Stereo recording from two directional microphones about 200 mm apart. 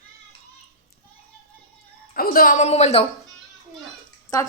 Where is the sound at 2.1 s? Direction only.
45° left (ahead or behind).